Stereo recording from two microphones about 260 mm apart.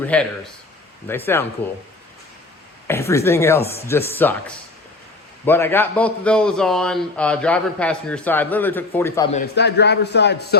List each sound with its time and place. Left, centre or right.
0.0 s a man's voice: centre
2.8 s a man's voice: centre
9.3 s a man's voice: left